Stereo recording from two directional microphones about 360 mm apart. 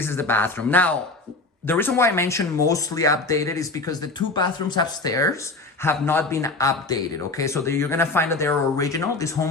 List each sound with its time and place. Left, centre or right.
0.0 s speech: centre